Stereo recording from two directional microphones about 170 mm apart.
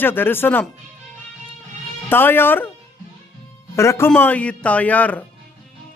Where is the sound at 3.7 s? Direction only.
15° left (ahead or behind).